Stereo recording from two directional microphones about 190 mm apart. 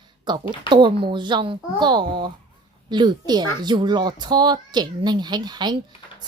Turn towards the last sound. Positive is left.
turn(degrees=-20)  # may be behind; listen again after turning